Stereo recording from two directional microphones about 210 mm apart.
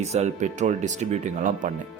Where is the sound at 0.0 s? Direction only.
30° right (ahead or behind).